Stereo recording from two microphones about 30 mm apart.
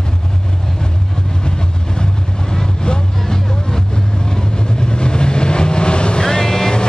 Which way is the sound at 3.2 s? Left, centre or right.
Centre.